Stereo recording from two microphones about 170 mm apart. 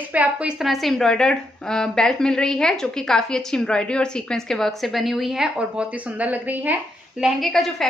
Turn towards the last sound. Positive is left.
turn(degrees=0)  # may be behind; listen again after turning